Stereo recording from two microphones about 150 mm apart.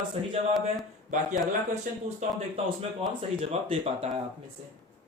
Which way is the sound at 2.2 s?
45° right (ahead or behind).